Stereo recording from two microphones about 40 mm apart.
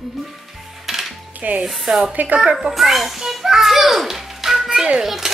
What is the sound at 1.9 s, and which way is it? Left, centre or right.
Speech, right.